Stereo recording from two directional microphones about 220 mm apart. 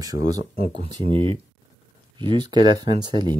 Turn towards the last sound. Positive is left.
turn(degrees=-20)  # may be behind; listen again after turning